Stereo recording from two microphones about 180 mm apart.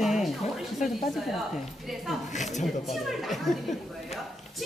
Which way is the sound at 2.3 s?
40° left (ahead or behind).